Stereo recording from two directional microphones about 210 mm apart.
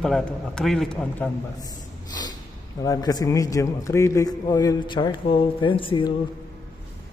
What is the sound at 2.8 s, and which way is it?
A man's voice, 20° left (ahead or behind).